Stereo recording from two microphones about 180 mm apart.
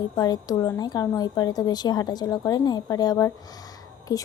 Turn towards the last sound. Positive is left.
turn(degrees=20)  # may be behind; listen again after turning